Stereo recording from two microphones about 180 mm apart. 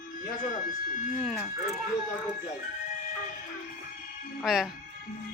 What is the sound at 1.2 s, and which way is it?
Speech, centre (ahead or behind).